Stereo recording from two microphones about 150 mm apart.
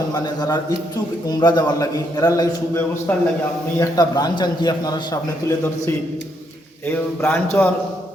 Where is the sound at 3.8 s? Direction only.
25° left (ahead or behind).